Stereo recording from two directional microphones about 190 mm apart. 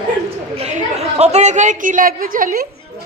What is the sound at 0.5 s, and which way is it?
A woman's voice, 35° right (ahead or behind).